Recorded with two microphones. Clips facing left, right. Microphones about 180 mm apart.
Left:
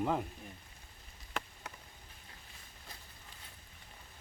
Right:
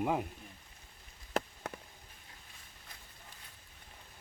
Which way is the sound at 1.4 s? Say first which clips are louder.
Right 7 dB; 40° right (ahead or behind).